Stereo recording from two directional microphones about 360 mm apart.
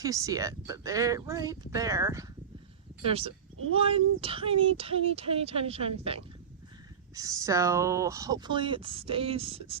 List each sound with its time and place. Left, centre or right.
0.0 s speech: centre
7.2 s speech: centre